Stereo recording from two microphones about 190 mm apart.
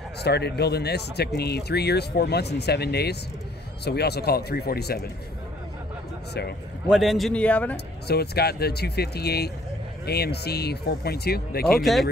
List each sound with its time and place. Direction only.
0.2 s speech: 60° left (ahead or behind)
6.9 s a man's voice: centre (ahead or behind)
7.7 s speech: 55° left (ahead or behind)
11.8 s a man's voice: centre (ahead or behind)